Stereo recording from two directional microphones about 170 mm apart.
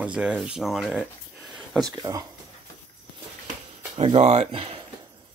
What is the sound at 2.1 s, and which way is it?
Speech, 15° right (ahead or behind).